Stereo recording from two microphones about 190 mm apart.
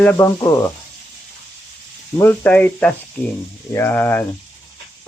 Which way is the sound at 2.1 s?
10° left (ahead or behind).